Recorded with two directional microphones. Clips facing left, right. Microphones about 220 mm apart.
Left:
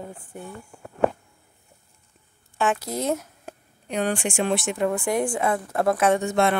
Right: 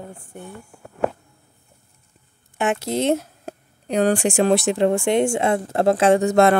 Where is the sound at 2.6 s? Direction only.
25° right (ahead or behind).